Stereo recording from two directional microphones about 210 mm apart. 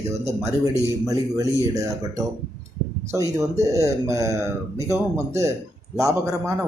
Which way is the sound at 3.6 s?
15° right (ahead or behind).